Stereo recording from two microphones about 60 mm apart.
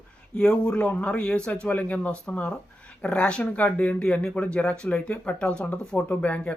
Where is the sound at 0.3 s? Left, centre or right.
Centre.